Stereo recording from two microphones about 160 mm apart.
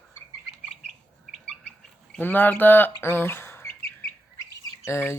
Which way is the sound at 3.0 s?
15° left (ahead or behind).